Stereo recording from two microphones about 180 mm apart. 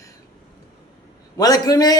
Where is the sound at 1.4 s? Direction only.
20° left (ahead or behind).